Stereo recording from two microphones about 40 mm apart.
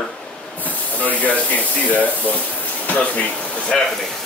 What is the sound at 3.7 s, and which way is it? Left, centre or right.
Speech, centre.